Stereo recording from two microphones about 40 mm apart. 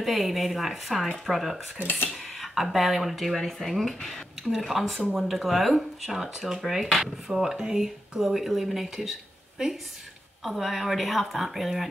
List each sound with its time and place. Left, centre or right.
0.0 s a woman's voice: centre
1.8 s speech: left
2.4 s a woman's voice: centre
10.4 s a woman's voice: centre